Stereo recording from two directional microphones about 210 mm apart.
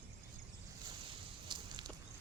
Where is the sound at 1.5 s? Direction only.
20° right (ahead or behind).